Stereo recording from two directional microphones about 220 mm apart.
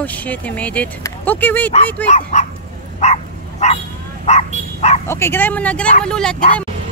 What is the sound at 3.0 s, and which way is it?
Bow-wow, 30° left (ahead or behind).